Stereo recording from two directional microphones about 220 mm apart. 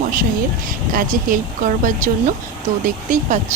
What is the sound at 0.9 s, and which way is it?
Speech, 35° right (ahead or behind).